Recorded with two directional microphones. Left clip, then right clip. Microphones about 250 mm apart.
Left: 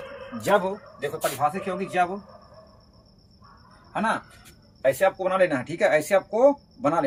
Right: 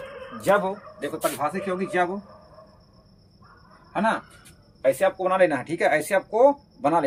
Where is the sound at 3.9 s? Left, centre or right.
Centre.